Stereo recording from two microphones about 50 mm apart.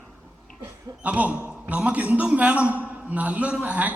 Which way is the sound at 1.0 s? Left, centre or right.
Right.